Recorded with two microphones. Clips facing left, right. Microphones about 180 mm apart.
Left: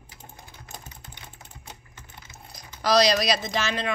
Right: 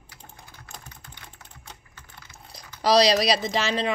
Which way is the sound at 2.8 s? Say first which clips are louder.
Right 2 dB; 30° right (ahead or behind).